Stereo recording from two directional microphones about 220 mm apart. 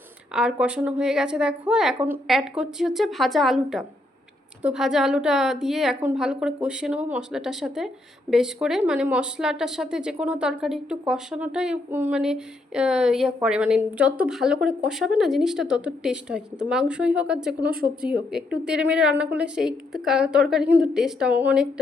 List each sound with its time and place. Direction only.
0.3 s speech: 5° right (ahead or behind)
17.7 s speech: 40° right (ahead or behind)
18.0 s speech: 5° right (ahead or behind)